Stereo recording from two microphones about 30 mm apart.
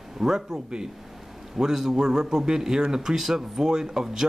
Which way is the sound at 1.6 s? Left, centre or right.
Centre.